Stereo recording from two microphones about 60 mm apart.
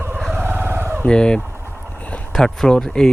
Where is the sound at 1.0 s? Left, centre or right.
Centre.